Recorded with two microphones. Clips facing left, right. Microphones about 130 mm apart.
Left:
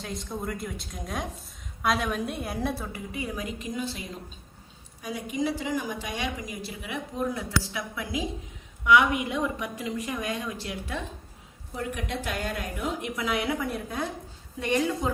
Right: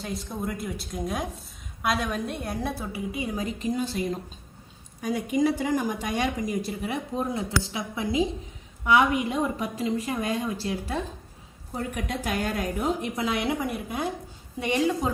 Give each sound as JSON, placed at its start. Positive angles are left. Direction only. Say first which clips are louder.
{"t": 0.0, "sound": "a woman's voice", "louder": "right 2 dB", "side_deg": -5}
{"t": 3.3, "sound": "a woman's voice", "louder": "right 5 dB", "side_deg": -35}
{"t": 5.0, "sound": "a woman's voice", "louder": "right 5 dB", "side_deg": -50}